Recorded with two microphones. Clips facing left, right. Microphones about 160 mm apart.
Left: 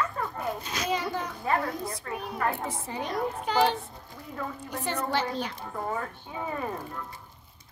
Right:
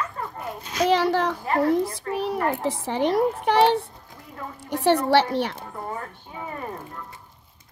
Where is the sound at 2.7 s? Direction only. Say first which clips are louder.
Right 10 dB; 80° right.